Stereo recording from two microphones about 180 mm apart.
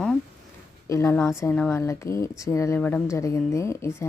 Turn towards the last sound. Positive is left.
turn(degrees=15)  # may be behind; listen again after turning